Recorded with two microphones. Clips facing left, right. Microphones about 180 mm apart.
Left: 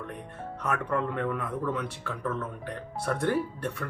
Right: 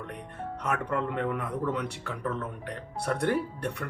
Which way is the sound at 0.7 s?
15° right (ahead or behind).